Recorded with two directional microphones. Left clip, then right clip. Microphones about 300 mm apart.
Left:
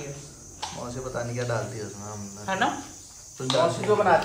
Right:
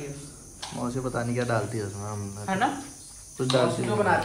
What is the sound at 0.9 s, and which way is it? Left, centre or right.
Speech, right.